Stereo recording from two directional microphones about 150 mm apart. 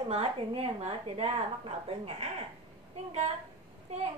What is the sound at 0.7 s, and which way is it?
A child's voice, 45° right (ahead or behind).